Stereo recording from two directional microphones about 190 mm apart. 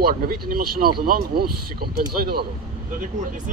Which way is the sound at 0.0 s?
50° right (ahead or behind).